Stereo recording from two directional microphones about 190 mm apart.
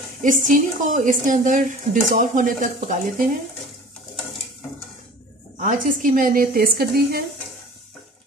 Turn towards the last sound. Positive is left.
turn(degrees=-55)  # may be behind; listen again after turning